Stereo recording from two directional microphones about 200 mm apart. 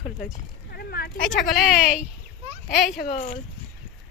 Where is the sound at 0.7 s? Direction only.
50° left (ahead or behind).